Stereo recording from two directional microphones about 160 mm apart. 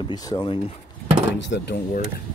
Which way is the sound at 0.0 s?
25° left (ahead or behind).